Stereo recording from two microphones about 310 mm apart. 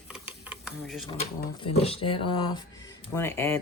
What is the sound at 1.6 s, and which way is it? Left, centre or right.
Speech, centre.